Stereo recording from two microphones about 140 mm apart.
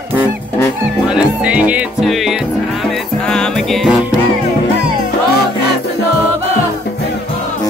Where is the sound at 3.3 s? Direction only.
Centre (ahead or behind).